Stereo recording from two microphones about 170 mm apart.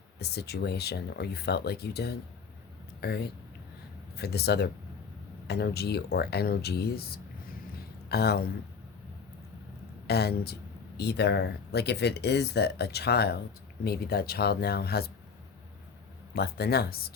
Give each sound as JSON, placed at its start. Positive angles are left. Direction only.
{"t": 0.2, "sound": "speech", "side_deg": 70}
{"t": 10.1, "sound": "speech", "side_deg": 70}
{"t": 16.3, "sound": "speech", "side_deg": 70}